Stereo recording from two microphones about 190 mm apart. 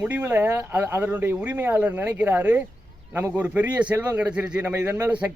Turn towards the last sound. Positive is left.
turn(degrees=-10)  # may be behind; listen again after turning